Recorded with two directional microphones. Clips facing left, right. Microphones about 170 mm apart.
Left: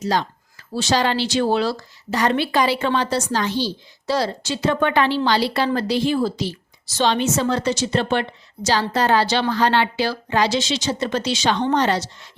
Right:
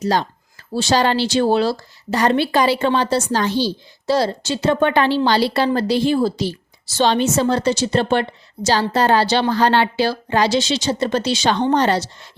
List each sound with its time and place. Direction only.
0.0 s a woman's voice: 35° right (ahead or behind)